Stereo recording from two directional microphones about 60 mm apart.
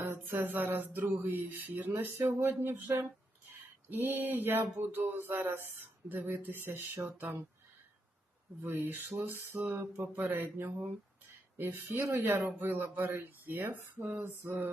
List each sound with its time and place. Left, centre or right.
0.3 s speech: right
3.5 s speech: right
8.6 s speech: right
11.9 s speech: right
12.2 s speech: right